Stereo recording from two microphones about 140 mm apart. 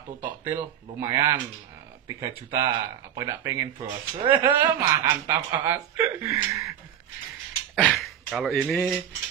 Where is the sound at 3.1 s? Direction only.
25° right (ahead or behind).